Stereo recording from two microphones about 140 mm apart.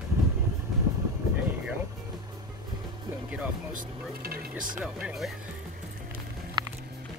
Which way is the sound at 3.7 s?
80° right.